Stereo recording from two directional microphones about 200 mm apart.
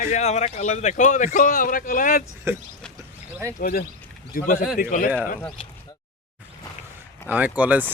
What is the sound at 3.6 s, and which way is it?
Speech, 45° left (ahead or behind).